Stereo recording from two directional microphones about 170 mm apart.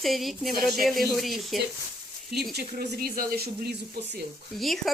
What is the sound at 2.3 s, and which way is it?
Speech, 65° right (ahead or behind).